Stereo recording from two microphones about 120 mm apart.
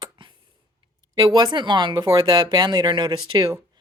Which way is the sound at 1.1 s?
40° right (ahead or behind).